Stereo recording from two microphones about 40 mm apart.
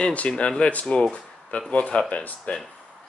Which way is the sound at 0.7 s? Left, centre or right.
Left.